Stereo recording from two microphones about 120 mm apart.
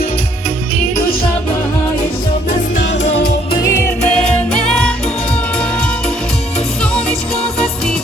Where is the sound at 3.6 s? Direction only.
25° left (ahead or behind).